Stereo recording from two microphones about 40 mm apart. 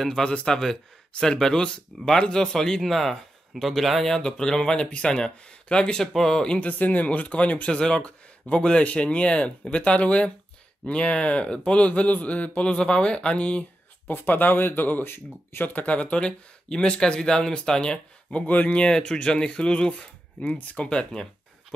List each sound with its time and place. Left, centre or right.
0.2 s a man's voice: left
0.5 s a man's voice: centre
4.4 s a man's voice: centre
6.1 s a man's voice: centre
6.6 s a man's voice: left
12.7 s speech: left
14.0 s speech: left
15.7 s a man's voice: left
16.3 s speech: left
18.3 s a man's voice: left
18.8 s speech: left